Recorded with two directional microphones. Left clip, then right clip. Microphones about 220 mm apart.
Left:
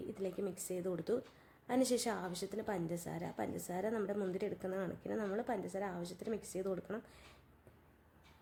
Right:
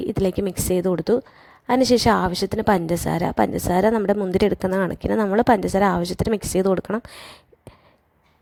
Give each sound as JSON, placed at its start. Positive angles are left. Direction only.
{"t": 0.1, "sound": "a woman's voice", "side_deg": -40}